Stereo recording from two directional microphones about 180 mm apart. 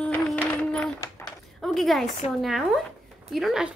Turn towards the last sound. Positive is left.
turn(degrees=0)  # may be behind; listen again after turning